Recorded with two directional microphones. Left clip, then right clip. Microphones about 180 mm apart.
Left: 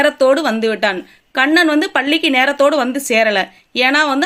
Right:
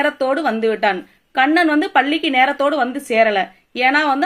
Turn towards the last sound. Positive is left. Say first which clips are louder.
# left 2 dB
turn(degrees=40)  # may be behind; listen again after turning